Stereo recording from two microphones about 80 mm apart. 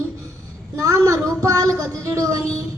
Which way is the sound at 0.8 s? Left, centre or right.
Right.